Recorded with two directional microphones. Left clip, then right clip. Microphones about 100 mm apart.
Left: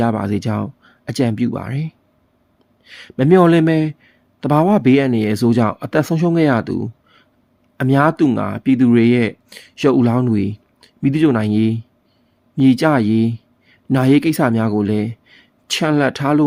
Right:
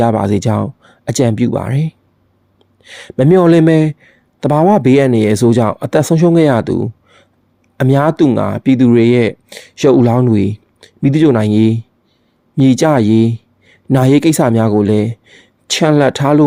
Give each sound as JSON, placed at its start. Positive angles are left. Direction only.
{"t": 0.0, "sound": "speech", "side_deg": -30}